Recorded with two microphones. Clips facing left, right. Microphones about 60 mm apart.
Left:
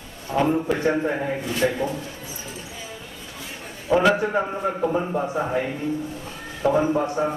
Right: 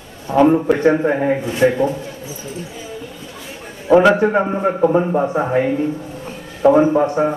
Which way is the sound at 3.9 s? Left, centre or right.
Right.